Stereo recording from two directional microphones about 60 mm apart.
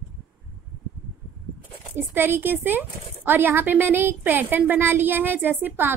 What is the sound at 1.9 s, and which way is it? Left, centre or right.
Speech, right.